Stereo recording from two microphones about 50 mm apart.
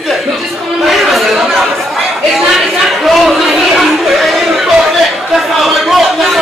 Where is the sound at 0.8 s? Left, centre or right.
Centre.